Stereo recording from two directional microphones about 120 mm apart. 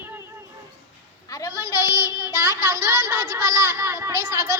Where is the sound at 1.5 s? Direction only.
20° right (ahead or behind).